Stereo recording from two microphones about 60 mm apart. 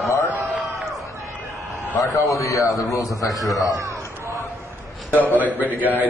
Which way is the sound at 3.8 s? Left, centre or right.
Right.